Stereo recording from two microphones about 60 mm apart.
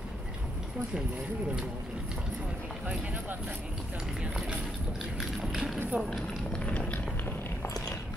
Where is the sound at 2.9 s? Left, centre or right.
Right.